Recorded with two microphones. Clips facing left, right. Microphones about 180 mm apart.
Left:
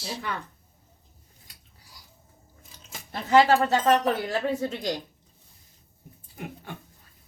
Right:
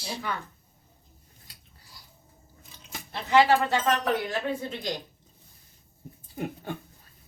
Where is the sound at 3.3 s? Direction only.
40° left (ahead or behind).